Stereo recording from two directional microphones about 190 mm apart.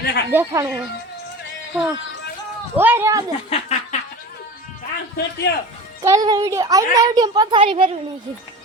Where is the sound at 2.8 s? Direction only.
10° right (ahead or behind).